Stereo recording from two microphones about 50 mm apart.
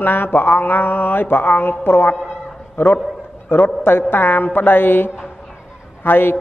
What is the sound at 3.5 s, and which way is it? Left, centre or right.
Mantra, left.